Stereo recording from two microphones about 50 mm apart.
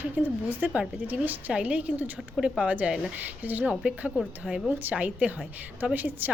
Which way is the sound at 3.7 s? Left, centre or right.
Right.